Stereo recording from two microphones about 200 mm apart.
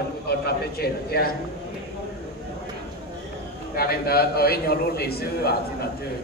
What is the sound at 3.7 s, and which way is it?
A man's voice, 50° left (ahead or behind).